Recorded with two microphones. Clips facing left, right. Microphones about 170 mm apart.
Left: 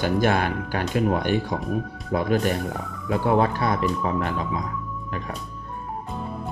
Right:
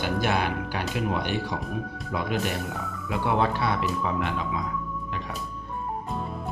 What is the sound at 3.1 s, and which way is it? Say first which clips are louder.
Speech: left 4 dB; 45° left (ahead or behind).